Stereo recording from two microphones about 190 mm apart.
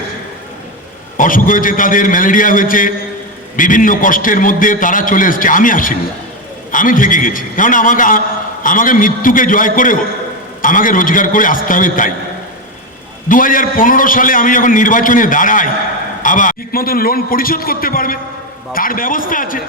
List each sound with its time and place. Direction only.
1.1 s a man's voice: 45° left (ahead or behind)
13.2 s a man's voice: 45° left (ahead or behind)